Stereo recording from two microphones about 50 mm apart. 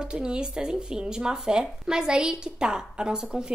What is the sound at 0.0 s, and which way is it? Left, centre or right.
Speech, centre.